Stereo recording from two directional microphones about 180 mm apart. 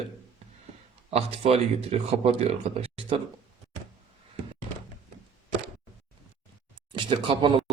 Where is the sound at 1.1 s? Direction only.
35° right (ahead or behind).